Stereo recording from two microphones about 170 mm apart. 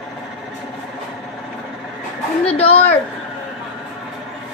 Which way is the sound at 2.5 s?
35° left (ahead or behind).